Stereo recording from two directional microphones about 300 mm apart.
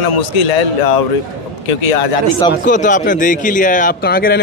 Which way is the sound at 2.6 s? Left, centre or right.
Left.